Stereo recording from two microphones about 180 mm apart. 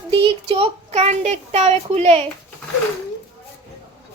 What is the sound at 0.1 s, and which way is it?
Speech, 30° right (ahead or behind).